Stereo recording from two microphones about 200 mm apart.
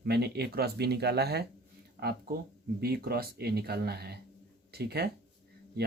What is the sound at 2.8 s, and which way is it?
Speech, 50° right (ahead or behind).